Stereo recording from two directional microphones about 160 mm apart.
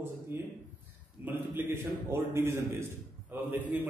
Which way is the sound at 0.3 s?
15° right (ahead or behind).